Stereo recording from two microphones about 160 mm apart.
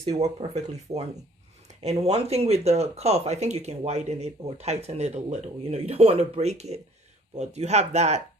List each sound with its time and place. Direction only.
0.2 s speech: 40° right (ahead or behind)